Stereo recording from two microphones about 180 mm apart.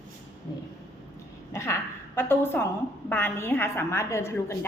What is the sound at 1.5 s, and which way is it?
A woman's voice, 15° left (ahead or behind).